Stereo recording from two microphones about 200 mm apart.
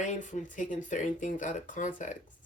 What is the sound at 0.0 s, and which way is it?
Speech, 40° left (ahead or behind).